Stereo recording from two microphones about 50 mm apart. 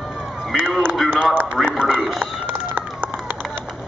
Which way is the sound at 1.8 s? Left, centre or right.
Right.